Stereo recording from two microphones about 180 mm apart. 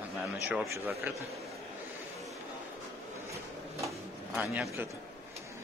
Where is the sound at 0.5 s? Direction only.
10° right (ahead or behind).